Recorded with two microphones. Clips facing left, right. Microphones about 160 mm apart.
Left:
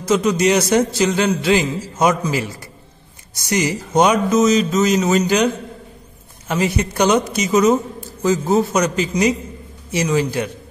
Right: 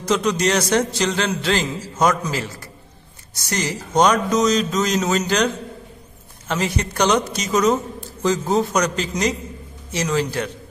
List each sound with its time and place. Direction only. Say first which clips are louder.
0.0 s a man's voice: left 3 dB; 5° left (ahead or behind)